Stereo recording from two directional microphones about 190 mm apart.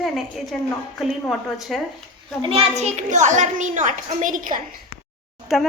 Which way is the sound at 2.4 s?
30° right (ahead or behind).